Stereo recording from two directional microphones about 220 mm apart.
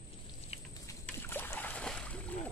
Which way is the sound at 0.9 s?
10° left (ahead or behind).